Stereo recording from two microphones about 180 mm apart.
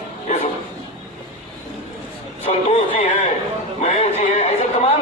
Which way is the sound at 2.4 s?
40° left (ahead or behind).